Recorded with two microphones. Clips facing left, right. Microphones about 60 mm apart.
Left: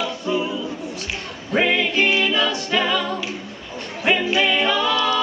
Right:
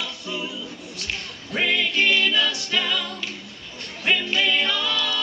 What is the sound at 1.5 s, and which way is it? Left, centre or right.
Music, left.